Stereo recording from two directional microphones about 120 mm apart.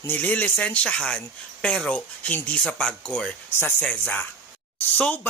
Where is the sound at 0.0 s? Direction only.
15° left (ahead or behind).